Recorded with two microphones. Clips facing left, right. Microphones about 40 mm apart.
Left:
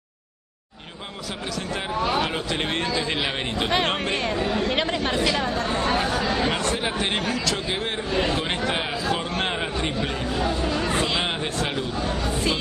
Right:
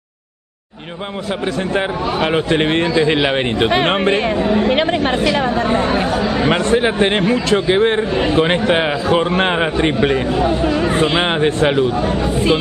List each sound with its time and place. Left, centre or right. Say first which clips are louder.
2.2 s a man's voice: right 11 dB; right
5.9 s speech: right 6 dB; centre
6.5 s a man's voice: right 10 dB; right
8.1 s speech: right 6 dB; right
8.4 s a man's voice: right 11 dB; right
10.3 s speech: right 9 dB; right